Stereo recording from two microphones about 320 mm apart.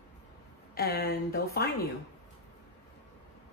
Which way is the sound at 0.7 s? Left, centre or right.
Left.